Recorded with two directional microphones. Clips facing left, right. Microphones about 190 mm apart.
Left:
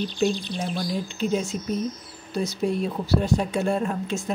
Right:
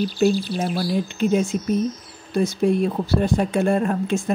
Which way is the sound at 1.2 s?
55° right (ahead or behind).